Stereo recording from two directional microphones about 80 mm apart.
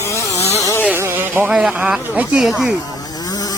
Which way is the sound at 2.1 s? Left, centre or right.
Right.